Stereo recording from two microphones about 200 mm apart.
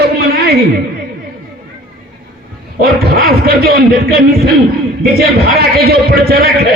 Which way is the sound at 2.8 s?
50° right (ahead or behind).